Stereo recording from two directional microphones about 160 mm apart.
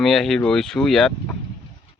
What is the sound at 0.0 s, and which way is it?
Speech, centre (ahead or behind).